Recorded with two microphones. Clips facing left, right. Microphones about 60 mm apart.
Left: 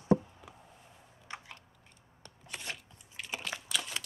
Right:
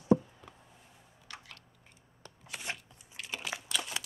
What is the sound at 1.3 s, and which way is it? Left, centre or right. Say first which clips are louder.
Chewing: left 4 dB; left.